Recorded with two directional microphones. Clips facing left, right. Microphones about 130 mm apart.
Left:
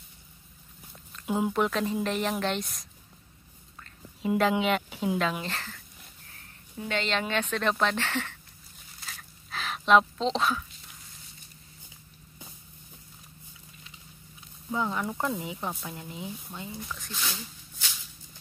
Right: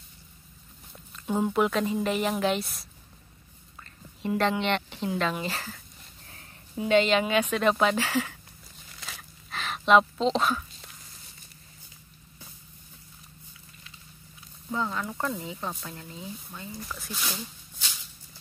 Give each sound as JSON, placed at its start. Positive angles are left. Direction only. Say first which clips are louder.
{"t": 1.2, "sound": "a woman's voice", "louder": "right 2 dB", "side_deg": 5}
{"t": 4.4, "sound": "a woman's voice", "louder": "left 1 dB", "side_deg": 5}
{"t": 6.8, "sound": "speech", "louder": "right 8 dB", "side_deg": -15}
{"t": 9.5, "sound": "a sound", "louder": "right 1 dB", "side_deg": 0}
{"t": 14.7, "sound": "speech", "louder": "left 1 dB", "side_deg": 15}
{"t": 16.7, "sound": "speech", "louder": "right 1 dB", "side_deg": -5}